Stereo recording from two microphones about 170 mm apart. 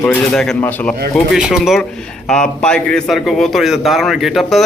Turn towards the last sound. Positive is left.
turn(degrees=0)  # may be behind; listen again after turning